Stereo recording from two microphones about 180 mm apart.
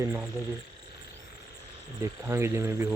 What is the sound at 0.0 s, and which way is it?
Speech, 10° right (ahead or behind).